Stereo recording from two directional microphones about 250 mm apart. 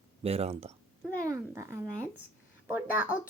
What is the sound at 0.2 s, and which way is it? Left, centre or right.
Speech, right.